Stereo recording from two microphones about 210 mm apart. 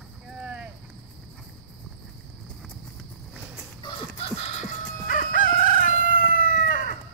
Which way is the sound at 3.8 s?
25° left (ahead or behind).